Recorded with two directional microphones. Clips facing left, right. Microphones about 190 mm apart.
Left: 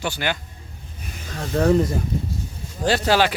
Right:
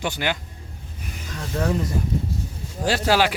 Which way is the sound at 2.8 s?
10° right (ahead or behind).